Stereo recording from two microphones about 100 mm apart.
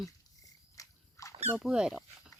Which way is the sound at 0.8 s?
35° left (ahead or behind).